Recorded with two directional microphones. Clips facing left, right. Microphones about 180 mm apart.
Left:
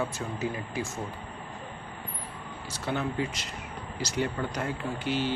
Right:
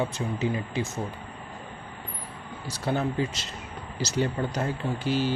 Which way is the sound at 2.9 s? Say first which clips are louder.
Right 4 dB; 40° right (ahead or behind).